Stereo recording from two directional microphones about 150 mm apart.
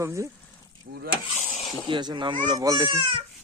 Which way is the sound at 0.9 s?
90° right.